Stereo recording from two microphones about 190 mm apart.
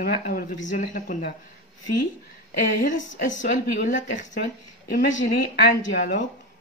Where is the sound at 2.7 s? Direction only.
40° left (ahead or behind).